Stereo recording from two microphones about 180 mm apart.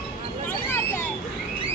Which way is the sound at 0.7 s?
10° left (ahead or behind).